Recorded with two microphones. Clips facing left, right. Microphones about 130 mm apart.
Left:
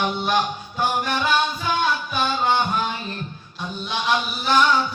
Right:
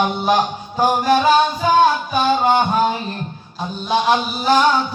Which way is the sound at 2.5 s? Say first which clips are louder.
Right 6 dB; 45° right (ahead or behind).